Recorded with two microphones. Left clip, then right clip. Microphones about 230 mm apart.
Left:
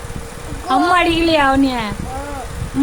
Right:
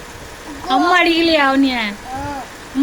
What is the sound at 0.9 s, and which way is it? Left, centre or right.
A woman's voice, centre.